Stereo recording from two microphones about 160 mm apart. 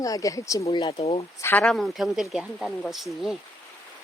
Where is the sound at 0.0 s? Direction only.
20° left (ahead or behind).